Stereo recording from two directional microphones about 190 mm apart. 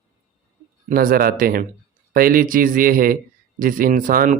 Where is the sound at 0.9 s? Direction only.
50° right (ahead or behind).